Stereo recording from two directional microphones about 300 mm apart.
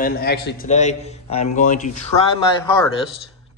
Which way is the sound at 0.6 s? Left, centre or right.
Left.